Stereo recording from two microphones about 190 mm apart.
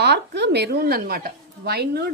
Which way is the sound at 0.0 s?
60° right (ahead or behind).